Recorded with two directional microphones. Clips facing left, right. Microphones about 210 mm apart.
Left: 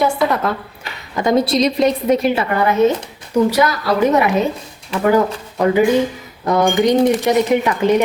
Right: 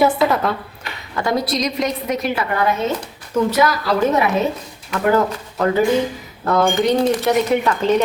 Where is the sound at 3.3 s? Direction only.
15° left (ahead or behind).